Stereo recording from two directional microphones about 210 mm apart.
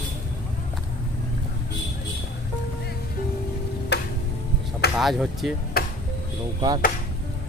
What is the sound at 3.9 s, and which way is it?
Music, 55° left (ahead or behind).